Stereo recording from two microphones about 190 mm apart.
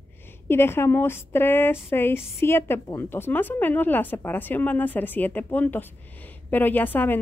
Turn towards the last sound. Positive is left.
turn(degrees=10)  # may be behind; listen again after turning